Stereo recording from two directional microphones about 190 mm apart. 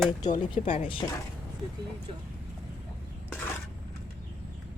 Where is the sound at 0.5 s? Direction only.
30° left (ahead or behind).